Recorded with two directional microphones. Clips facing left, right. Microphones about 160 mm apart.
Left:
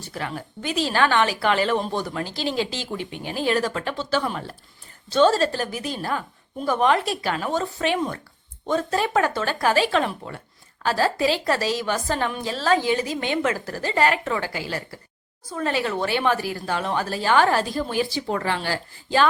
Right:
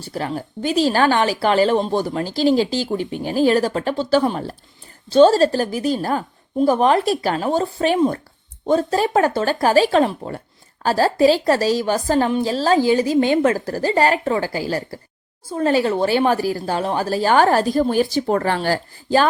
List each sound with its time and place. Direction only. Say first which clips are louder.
0.0 s a woman's voice: right 6 dB; 35° right (ahead or behind)